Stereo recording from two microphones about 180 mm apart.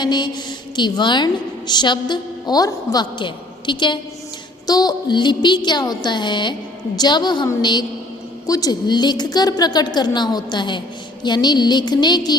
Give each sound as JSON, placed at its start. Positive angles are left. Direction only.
{"t": 0.0, "sound": "a woman's voice", "side_deg": 25}